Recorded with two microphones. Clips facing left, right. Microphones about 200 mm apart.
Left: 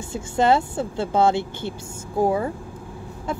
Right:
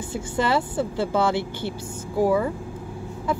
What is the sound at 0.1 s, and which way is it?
Speech, 25° left (ahead or behind).